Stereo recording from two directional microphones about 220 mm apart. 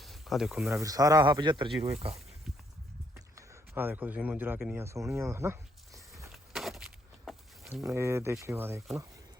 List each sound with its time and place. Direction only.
0.0 s snake: centre (ahead or behind)
0.7 s speech: 15° right (ahead or behind)
3.2 s speech: 15° right (ahead or behind)
6.2 s a sound: centre (ahead or behind)
7.9 s speech: 10° right (ahead or behind)